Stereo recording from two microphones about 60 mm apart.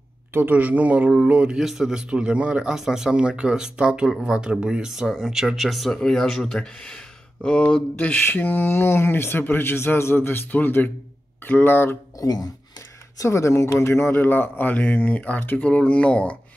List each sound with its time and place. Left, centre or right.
0.3 s speech: right
1.6 s speech: centre
2.7 s speech: centre; by 8.2 s left
8.3 s a man's voice: left
12.2 s speech: left
13.2 s speech: left
14.1 s speech: left